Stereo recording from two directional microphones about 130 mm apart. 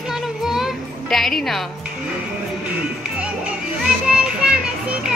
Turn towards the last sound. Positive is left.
turn(degrees=-5)  # may be behind; listen again after turning